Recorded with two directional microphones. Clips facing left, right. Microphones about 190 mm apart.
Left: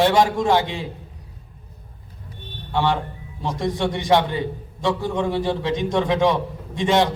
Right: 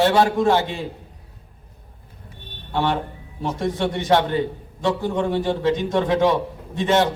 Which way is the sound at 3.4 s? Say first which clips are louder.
Even; 15° left (ahead or behind).